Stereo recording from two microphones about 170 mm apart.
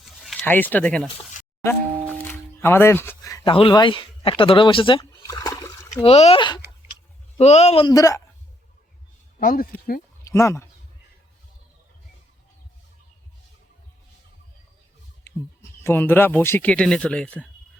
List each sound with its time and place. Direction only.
0.0 s a sound: centre (ahead or behind)
0.4 s speech: 10° left (ahead or behind)
2.2 s music: 15° left (ahead or behind)
3.5 s speech: 30° left (ahead or behind)
5.2 s a sound: 20° left (ahead or behind)
5.9 s speech: 35° left (ahead or behind)
7.3 s speech: 40° left (ahead or behind)
7.9 s speech: 20° left (ahead or behind)
9.4 s speech: 55° left (ahead or behind)
10.2 s speech: 15° left (ahead or behind)
15.8 s speech: 15° left (ahead or behind)